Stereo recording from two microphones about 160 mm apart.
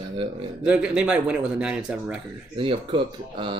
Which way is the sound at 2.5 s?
30° right (ahead or behind).